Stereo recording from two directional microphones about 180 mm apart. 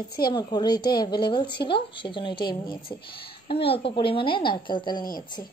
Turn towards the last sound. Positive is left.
turn(degrees=25)  # may be behind; listen again after turning